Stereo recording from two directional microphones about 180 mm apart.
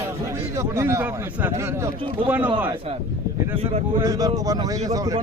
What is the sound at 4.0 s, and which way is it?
Speech, 20° right (ahead or behind).